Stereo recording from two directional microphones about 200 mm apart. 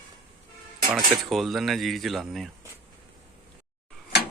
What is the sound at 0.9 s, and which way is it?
Mechanisms, centre (ahead or behind).